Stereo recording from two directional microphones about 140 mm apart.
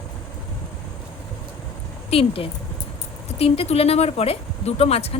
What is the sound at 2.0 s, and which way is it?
Speech, 45° left (ahead or behind).